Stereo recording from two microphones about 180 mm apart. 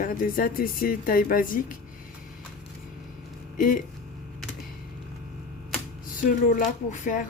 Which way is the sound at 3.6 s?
45° left (ahead or behind).